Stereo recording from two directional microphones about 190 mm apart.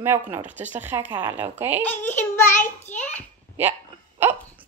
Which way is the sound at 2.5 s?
40° left (ahead or behind).